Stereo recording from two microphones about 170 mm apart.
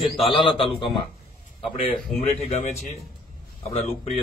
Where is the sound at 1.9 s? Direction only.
5° left (ahead or behind).